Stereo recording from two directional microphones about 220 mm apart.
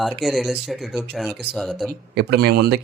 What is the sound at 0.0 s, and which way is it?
Speech, centre (ahead or behind).